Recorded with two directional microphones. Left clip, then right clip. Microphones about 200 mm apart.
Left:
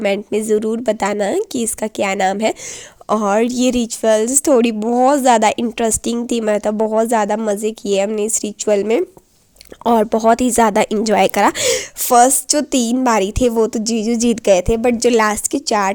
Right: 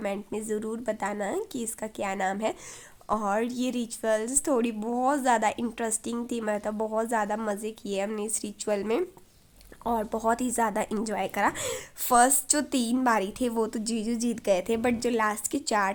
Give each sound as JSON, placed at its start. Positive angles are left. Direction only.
{"t": 0.0, "sound": "a woman's voice", "side_deg": 40}
{"t": 9.8, "sound": "a woman's voice", "side_deg": 45}
{"t": 12.0, "sound": "a woman's voice", "side_deg": 30}
{"t": 15.4, "sound": "a woman's voice", "side_deg": 30}